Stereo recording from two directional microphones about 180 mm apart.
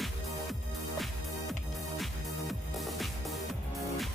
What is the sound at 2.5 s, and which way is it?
Music, centre (ahead or behind).